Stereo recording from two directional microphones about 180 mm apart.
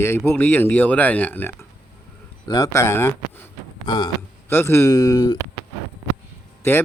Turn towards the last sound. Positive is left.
turn(degrees=10)  # may be behind; listen again after turning